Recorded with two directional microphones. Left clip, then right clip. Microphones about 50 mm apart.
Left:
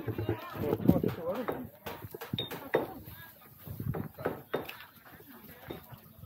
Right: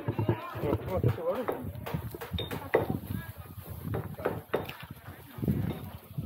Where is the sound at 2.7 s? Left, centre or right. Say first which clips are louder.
Right 3 dB; left.